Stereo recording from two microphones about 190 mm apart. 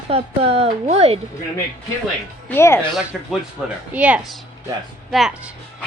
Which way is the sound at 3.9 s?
5° right (ahead or behind).